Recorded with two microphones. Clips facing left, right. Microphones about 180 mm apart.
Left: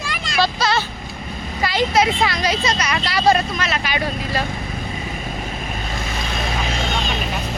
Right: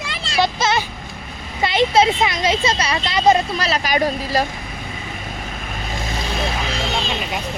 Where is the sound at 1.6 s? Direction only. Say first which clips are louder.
Right 2 dB; 25° right (ahead or behind).